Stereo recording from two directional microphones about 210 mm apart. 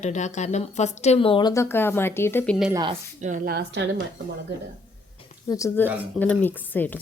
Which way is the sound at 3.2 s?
35° right (ahead or behind).